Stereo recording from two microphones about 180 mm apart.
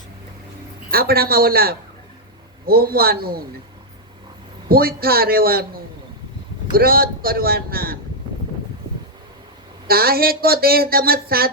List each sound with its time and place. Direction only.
0.9 s speech: 55° right (ahead or behind)
4.7 s speech: 55° right (ahead or behind)
9.8 s speech: 55° right (ahead or behind)